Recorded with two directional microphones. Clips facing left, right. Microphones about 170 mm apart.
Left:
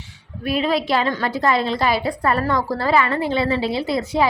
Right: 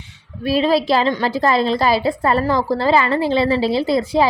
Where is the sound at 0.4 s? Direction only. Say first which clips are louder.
Right 4 dB; 30° right (ahead or behind).